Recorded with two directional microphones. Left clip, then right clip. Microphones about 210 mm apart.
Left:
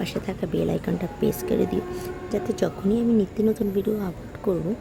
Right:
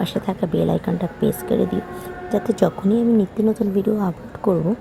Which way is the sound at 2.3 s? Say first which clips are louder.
Right 7 dB; 10° right (ahead or behind).